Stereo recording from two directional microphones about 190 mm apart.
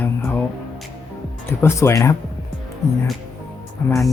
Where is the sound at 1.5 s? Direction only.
15° left (ahead or behind).